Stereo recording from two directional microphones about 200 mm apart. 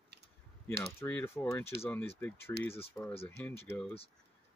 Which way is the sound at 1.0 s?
10° left (ahead or behind).